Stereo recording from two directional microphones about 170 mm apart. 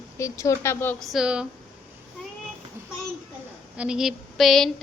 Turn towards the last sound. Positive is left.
turn(degrees=0)  # may be behind; listen again after turning